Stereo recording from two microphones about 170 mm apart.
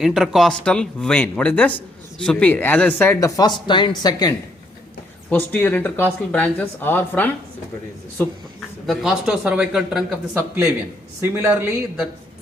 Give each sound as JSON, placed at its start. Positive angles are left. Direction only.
{"t": 0.0, "sound": "speech", "side_deg": 0}
{"t": 5.3, "sound": "speech", "side_deg": 10}
{"t": 8.9, "sound": "speech", "side_deg": -5}
{"t": 11.2, "sound": "speech", "side_deg": -15}